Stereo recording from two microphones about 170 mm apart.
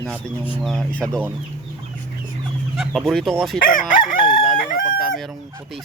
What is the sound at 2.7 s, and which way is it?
Speech, centre (ahead or behind).